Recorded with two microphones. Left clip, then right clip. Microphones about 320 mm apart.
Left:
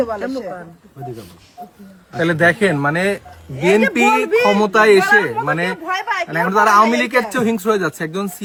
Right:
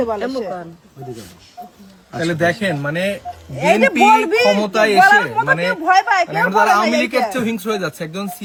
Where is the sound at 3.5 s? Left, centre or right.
Right.